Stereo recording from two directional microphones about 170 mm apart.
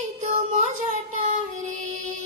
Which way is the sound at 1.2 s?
45° right (ahead or behind).